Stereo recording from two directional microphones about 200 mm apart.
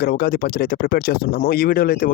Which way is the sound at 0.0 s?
50° left (ahead or behind).